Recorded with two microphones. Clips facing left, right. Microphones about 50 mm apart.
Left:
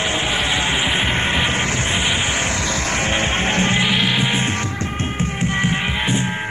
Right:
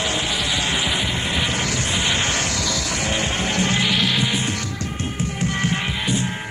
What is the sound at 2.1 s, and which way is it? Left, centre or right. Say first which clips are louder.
Music: left 1 dB; centre.